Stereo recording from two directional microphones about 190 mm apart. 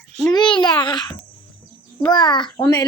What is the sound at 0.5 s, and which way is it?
Speech, 5° left (ahead or behind).